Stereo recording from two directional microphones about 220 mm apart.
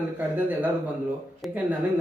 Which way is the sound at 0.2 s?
10° right (ahead or behind).